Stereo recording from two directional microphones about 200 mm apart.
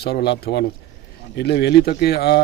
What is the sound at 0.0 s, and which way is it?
Speech, 55° left (ahead or behind).